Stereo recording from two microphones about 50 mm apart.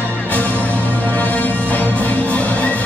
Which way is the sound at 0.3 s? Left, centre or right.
Left.